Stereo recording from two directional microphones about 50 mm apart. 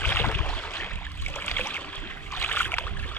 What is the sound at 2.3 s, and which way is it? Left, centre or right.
Boat, left.